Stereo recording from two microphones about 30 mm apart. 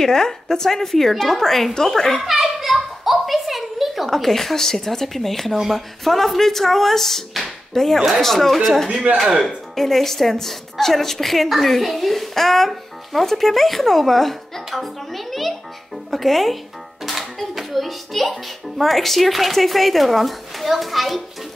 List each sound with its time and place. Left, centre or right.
0.0 s a woman's voice: centre
2.6 s a sound: centre
4.1 s a woman's voice: centre
8.9 s speech: right
9.8 s a woman's voice: centre